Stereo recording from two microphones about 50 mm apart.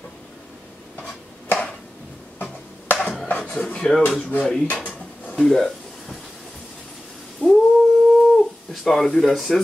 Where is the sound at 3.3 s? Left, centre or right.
Left.